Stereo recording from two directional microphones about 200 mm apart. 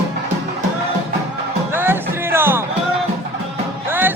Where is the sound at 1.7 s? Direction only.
10° right (ahead or behind).